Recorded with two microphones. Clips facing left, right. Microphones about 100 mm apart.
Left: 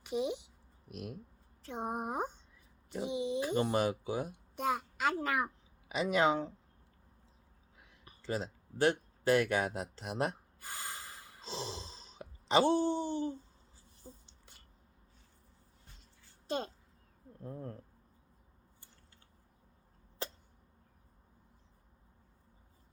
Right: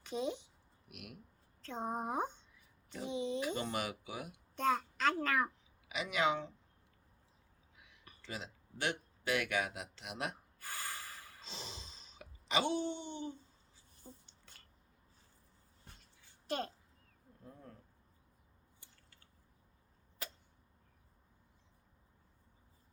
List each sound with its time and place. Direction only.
0.0 s a sound: 15° left (ahead or behind)
0.9 s speech: 35° left (ahead or behind)
1.6 s speech: 15° left (ahead or behind)
3.4 s speech: 35° left (ahead or behind)
4.5 s a sound: 15° left (ahead or behind)
5.2 s speech: 15° left (ahead or behind)
5.9 s speech: 35° left (ahead or behind)
7.8 s speech: 35° left (ahead or behind)
10.6 s snort: 20° left (ahead or behind)
11.3 s speech: 35° left (ahead or behind)
14.0 s a sound: 15° left (ahead or behind)
16.5 s speech: 20° left (ahead or behind)
17.4 s speech: 45° left (ahead or behind)
20.2 s a sound: 30° left (ahead or behind)